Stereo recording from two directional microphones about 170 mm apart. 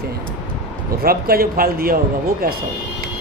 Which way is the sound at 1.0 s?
60° right (ahead or behind).